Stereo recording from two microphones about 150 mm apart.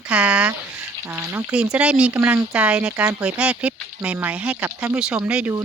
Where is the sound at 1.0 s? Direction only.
15° right (ahead or behind).